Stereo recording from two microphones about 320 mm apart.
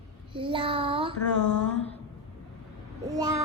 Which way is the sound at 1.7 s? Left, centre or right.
Centre.